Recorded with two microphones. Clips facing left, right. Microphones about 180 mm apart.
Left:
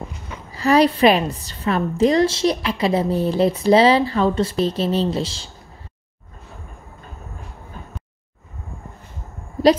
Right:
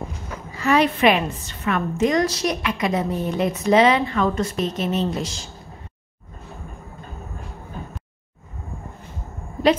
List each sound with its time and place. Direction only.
0.5 s a woman's voice: 35° left (ahead or behind)